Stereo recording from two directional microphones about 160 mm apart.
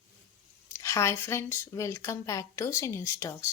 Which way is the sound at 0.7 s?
20° left (ahead or behind).